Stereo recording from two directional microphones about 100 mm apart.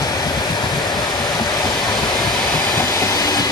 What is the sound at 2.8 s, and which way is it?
Train, 40° left (ahead or behind).